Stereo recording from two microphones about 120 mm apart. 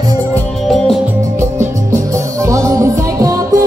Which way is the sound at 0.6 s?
5° left (ahead or behind).